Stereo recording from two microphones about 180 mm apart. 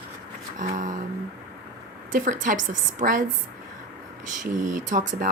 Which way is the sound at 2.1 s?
45° right (ahead or behind).